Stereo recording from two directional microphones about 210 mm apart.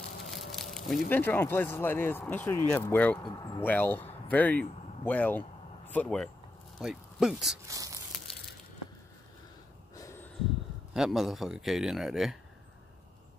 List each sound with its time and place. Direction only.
0.2 s speech: centre (ahead or behind)
7.6 s a sound: 15° right (ahead or behind)
8.1 s crushing: centre (ahead or behind)
9.9 s snort: 10° left (ahead or behind)
10.9 s speech: centre (ahead or behind)